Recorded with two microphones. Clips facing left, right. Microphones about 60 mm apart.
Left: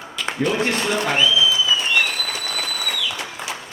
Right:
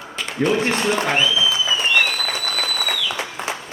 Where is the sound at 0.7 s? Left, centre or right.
Right.